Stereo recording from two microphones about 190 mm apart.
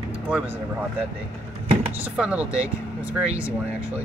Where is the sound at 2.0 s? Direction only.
5° right (ahead or behind).